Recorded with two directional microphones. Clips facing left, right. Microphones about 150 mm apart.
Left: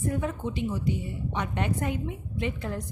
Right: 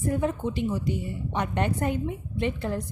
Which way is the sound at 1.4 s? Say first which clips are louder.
Right 3 dB; 40° right (ahead or behind).